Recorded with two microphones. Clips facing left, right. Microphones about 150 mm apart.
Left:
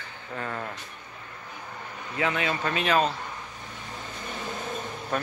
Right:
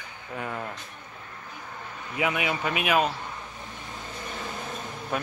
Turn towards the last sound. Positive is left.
turn(degrees=-5)  # may be behind; listen again after turning